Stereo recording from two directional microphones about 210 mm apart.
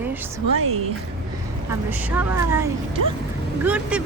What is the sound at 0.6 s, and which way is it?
Speech, 90° right.